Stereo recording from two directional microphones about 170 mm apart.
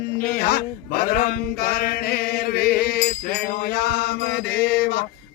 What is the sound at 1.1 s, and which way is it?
Chant, 60° left (ahead or behind).